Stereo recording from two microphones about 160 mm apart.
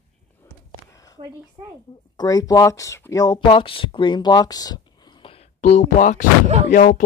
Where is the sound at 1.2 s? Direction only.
25° right (ahead or behind).